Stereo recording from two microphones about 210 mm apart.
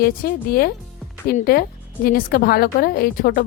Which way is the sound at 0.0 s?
45° left (ahead or behind).